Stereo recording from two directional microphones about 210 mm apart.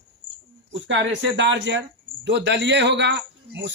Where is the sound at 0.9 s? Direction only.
60° right (ahead or behind).